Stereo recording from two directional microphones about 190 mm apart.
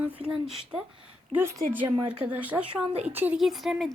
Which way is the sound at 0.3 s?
5° right (ahead or behind).